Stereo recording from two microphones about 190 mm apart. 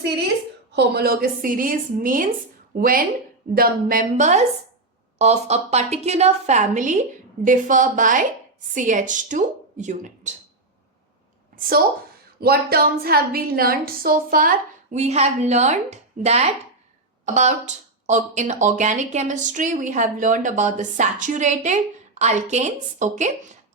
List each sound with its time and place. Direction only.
0.7 s a woman's voice: 60° right (ahead or behind); by 10.3 s 40° right (ahead or behind)
11.5 s a sound: 50° right (ahead or behind)
12.4 s a woman's voice: 55° right (ahead or behind); by 23.3 s 40° right (ahead or behind)